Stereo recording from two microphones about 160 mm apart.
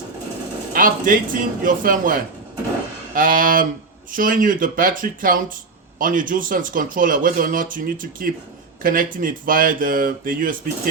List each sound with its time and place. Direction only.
0.7 s speech: 60° right (ahead or behind)